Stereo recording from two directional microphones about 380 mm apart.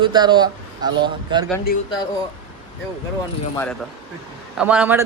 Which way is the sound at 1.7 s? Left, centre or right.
Left.